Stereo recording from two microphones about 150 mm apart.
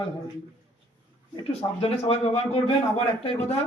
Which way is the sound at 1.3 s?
40° left (ahead or behind).